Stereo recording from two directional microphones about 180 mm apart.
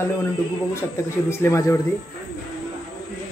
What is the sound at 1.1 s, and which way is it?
Speech, 15° left (ahead or behind).